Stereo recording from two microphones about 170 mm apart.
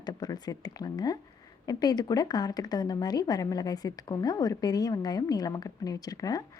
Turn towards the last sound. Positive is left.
turn(degrees=20)  # may be behind; listen again after turning